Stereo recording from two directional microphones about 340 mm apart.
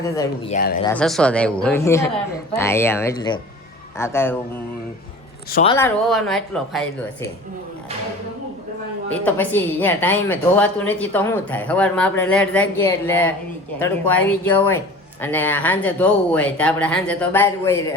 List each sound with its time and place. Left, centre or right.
0.5 s speech: left
0.9 s a woman's voice: centre
5.5 s speech: left
5.7 s a woman's voice: centre
9.2 s a woman's voice: centre